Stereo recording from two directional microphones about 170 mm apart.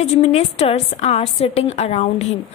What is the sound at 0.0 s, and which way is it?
A woman's voice, 40° left (ahead or behind).